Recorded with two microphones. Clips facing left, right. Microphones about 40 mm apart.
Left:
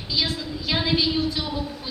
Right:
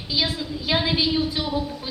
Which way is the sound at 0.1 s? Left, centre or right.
Centre.